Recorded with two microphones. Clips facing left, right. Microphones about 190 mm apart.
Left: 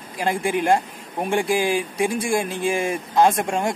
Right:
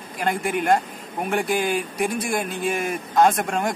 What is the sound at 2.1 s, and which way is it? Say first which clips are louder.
A man's voice: left 3 dB; 25° left (ahead or behind).